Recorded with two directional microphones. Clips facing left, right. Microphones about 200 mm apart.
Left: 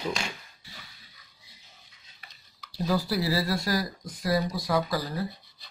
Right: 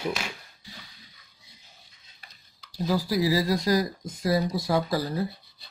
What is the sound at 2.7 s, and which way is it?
Speech, 10° right (ahead or behind).